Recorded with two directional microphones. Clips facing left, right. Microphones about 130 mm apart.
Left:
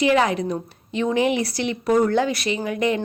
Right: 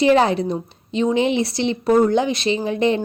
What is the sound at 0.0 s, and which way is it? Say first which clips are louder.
A woman's voice: right 3 dB; 30° right (ahead or behind).